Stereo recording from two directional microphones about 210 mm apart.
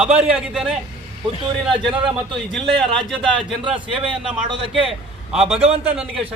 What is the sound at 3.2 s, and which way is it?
Speech, 25° right (ahead or behind).